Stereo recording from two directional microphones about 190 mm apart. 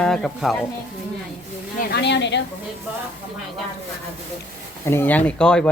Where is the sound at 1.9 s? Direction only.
65° left (ahead or behind).